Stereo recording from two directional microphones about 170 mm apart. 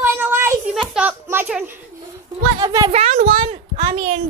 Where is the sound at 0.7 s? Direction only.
5° right (ahead or behind).